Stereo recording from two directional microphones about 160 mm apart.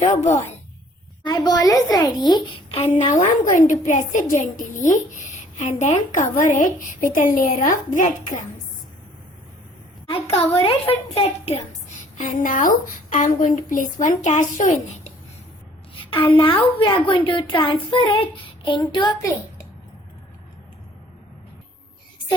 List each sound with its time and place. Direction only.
1.2 s a woman's voice: 25° left (ahead or behind)
2.7 s a woman's voice: 40° left (ahead or behind)
3.1 s a woman's voice: 50° left (ahead or behind)
10.1 s a woman's voice: 35° left (ahead or behind)
12.1 s a woman's voice: 55° left (ahead or behind)
16.0 s a woman's voice: 35° left (ahead or behind)